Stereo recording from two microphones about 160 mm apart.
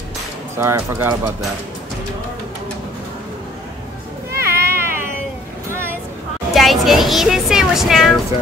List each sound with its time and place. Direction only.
0.6 s speech: 15° right (ahead or behind)
4.3 s a sound: 15° right (ahead or behind)
5.7 s vehicle: 15° right (ahead or behind)
6.5 s speech: centre (ahead or behind)